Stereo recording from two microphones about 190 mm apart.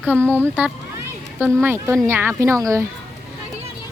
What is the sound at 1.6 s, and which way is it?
A woman's voice, 10° right (ahead or behind).